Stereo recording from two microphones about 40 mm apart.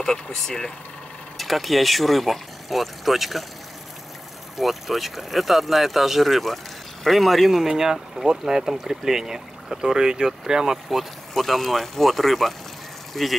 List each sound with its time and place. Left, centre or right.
0.0 s speech: centre
1.4 s speech: centre
4.6 s speech: centre
11.3 s speech: centre